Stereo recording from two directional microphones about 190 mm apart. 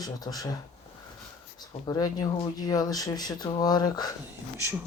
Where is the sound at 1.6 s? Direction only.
20° left (ahead or behind).